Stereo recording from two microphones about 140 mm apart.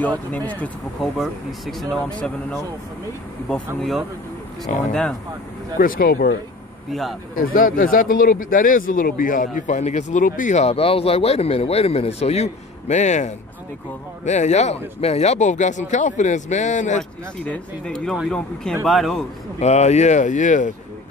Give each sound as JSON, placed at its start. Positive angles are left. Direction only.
{"t": 0.0, "sound": "speech", "side_deg": 10}
{"t": 1.1, "sound": "speech", "side_deg": 0}
{"t": 3.4, "sound": "speech", "side_deg": 5}
{"t": 4.7, "sound": "speech", "side_deg": 60}
{"t": 5.8, "sound": "speech", "side_deg": 90}
{"t": 6.9, "sound": "speech", "side_deg": 0}
{"t": 7.3, "sound": "speech", "side_deg": 80}
{"t": 17.5, "sound": "speech", "side_deg": 5}
{"t": 19.6, "sound": "speech", "side_deg": 50}